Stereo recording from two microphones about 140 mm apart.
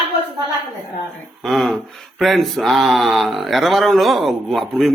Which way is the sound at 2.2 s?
Centre (ahead or behind).